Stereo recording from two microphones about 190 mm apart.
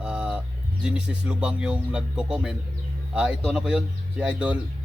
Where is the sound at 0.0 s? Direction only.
5° right (ahead or behind).